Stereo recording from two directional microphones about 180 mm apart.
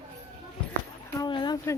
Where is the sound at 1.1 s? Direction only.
25° left (ahead or behind).